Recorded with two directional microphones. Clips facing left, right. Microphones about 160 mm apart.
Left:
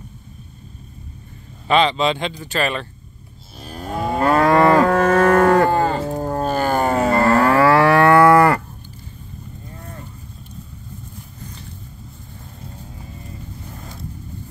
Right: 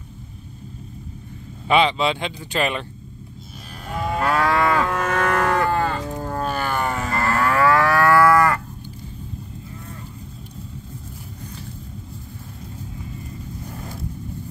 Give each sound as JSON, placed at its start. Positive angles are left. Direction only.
{"t": 1.7, "sound": "speech", "side_deg": -10}
{"t": 3.7, "sound": "moo", "side_deg": 35}
{"t": 4.6, "sound": "livestock", "side_deg": 40}
{"t": 5.9, "sound": "a sound", "side_deg": 35}